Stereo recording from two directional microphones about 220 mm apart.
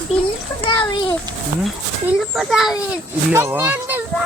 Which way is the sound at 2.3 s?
Centre (ahead or behind).